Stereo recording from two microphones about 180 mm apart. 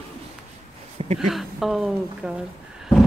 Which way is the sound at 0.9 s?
35° right (ahead or behind).